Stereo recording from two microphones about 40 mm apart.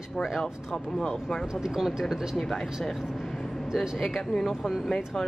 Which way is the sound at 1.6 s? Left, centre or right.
Centre.